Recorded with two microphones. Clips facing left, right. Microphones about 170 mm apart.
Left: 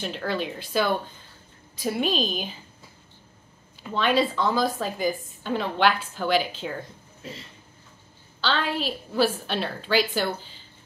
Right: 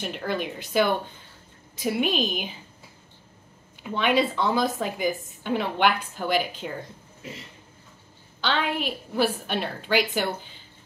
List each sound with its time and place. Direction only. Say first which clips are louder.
0.0 s a woman's voice: even; 10° right (ahead or behind)
3.9 s a woman's voice: even; 15° right (ahead or behind)
8.4 s a woman's voice: even; 15° right (ahead or behind)